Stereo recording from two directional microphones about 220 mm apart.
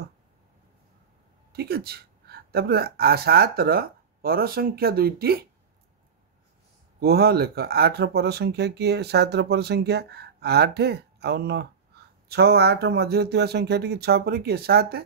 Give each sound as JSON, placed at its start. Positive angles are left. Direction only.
{"t": 1.5, "sound": "speech", "side_deg": -45}
{"t": 7.0, "sound": "speech", "side_deg": -45}